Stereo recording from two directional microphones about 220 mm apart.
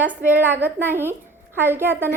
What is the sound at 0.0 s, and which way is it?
A woman's voice, 10° right (ahead or behind).